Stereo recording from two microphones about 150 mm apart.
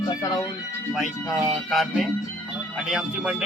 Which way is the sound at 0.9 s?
Centre (ahead or behind).